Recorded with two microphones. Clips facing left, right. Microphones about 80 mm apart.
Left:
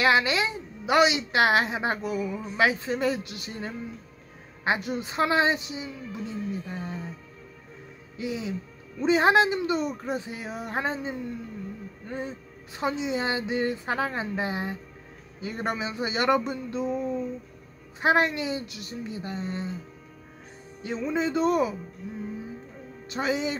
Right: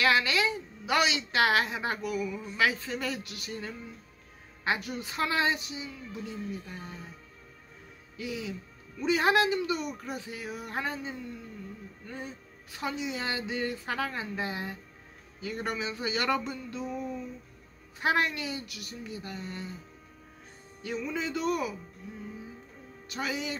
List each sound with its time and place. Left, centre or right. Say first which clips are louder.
0.0 s a woman's voice: left 3 dB; left
8.2 s a woman's voice: left 5 dB; left
18.0 s a woman's voice: left 5 dB; left
20.8 s a woman's voice: left 6 dB; left
23.0 s a woman's voice: left 6 dB; left